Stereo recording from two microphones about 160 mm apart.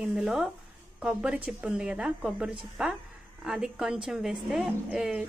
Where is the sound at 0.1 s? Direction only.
5° right (ahead or behind).